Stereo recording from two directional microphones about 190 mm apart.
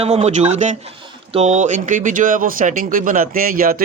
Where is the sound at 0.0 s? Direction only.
35° right (ahead or behind).